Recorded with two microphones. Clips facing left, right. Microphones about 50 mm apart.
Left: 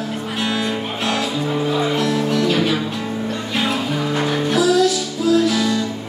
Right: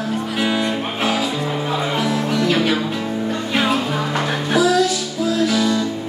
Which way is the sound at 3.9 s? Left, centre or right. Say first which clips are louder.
Left 1 dB; centre.